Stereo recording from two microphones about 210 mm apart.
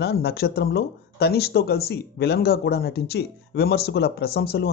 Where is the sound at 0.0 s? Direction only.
50° left (ahead or behind).